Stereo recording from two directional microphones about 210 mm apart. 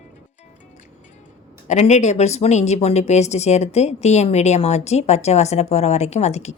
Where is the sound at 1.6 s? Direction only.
35° left (ahead or behind).